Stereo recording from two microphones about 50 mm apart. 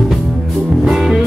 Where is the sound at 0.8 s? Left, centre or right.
Centre.